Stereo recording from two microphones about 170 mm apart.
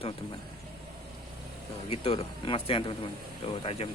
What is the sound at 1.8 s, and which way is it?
Speech, 35° left (ahead or behind).